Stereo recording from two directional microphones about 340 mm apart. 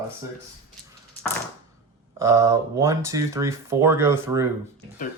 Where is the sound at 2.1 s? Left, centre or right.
Centre.